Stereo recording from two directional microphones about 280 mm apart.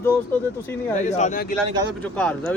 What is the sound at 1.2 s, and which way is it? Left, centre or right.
Speech, left.